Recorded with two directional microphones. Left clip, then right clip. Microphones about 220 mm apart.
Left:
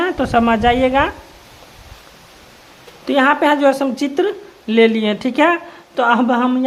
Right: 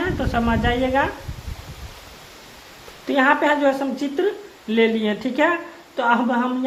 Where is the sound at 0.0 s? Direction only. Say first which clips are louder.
Left 7 dB; 40° left (ahead or behind).